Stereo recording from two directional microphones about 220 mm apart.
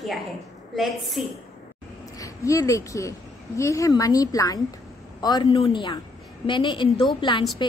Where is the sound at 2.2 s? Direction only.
15° left (ahead or behind).